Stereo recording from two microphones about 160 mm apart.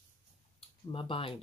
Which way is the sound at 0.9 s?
35° left (ahead or behind).